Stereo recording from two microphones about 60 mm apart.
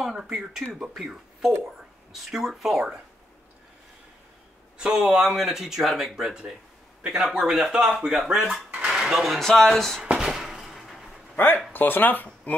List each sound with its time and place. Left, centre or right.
0.0 s speech: centre
4.7 s speech: centre
9.4 s speech: centre
10.1 s a sound: centre
11.3 s speech: left